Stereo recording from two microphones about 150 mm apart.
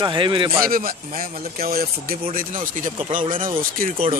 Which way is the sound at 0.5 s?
75° right (ahead or behind).